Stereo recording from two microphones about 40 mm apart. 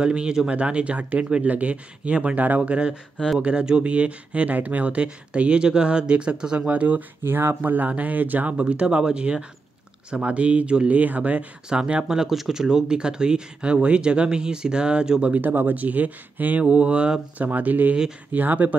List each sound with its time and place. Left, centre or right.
0.0 s speech: right
0.5 s speech: right
2.3 s speech: right
2.7 s speech: right
6.7 s speech: right
7.2 s speech: right
7.6 s speech: right
8.5 s speech: right
11.0 s speech: right
11.7 s speech: right
15.7 s speech: right
16.6 s speech: right
17.4 s speech: right